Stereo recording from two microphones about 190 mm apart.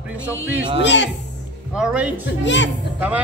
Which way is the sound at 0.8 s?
70° left (ahead or behind).